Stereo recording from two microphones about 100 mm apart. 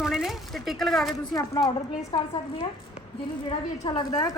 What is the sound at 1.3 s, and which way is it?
Speech, 40° left (ahead or behind).